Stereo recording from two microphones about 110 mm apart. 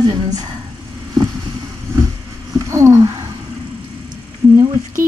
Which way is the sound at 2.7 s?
30° right (ahead or behind).